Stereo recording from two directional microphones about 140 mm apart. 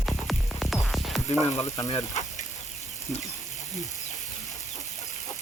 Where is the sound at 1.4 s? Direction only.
20° left (ahead or behind).